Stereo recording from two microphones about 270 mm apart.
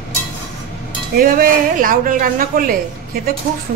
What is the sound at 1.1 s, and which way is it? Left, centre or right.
Speech, right.